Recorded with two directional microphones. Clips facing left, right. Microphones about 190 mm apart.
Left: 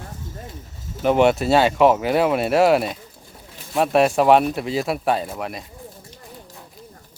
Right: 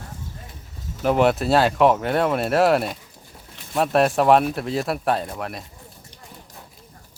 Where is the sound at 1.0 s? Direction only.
Centre (ahead or behind).